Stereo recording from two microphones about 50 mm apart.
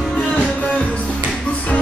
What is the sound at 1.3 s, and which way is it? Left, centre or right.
Music, centre.